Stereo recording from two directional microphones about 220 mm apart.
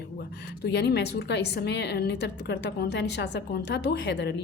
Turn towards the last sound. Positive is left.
turn(degrees=50)  # may be behind; listen again after turning